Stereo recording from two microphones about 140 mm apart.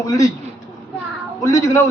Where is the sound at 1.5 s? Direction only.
25° left (ahead or behind).